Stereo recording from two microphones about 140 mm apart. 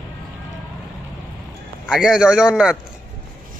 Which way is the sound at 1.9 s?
5° right (ahead or behind).